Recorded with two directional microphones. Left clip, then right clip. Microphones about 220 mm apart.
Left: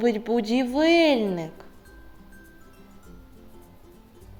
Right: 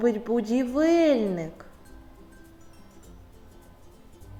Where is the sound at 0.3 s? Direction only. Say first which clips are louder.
Left 2 dB; 25° left (ahead or behind).